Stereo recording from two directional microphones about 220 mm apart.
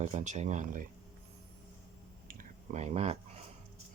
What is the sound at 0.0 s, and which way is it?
Speech, 35° right (ahead or behind).